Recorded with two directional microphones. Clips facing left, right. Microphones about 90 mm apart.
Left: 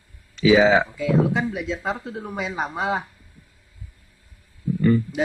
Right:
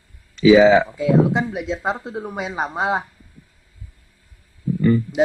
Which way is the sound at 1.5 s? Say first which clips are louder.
Right 3 dB; 70° right (ahead or behind).